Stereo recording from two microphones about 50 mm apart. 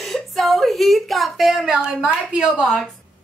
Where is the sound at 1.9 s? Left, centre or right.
Centre.